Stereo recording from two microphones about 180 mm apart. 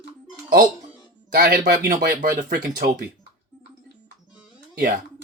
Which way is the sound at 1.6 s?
45° right (ahead or behind).